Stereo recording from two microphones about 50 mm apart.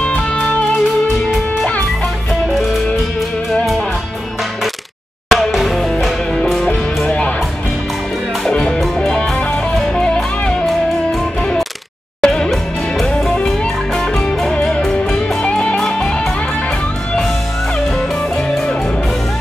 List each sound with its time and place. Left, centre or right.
0.0 s music: left
2.4 s music: centre
5.3 s music: centre
6.3 s music: centre
7.1 s music: centre
8.5 s music: centre
12.2 s music: centre
12.4 s music: centre
15.4 s music: left
17.7 s music: centre